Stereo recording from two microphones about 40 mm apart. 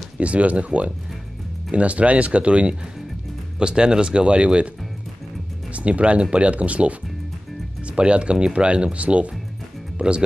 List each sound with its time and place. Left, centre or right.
0.2 s speech: right
5.7 s speech: right